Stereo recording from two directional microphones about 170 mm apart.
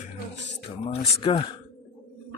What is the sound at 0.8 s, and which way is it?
Speech, 35° left (ahead or behind).